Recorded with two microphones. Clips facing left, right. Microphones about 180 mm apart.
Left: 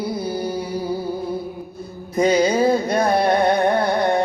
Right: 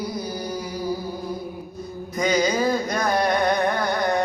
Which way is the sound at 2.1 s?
30° left (ahead or behind).